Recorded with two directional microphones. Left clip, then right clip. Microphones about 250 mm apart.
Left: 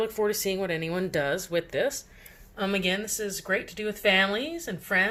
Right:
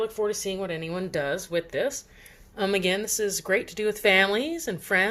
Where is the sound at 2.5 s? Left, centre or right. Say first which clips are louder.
Right 3 dB; right.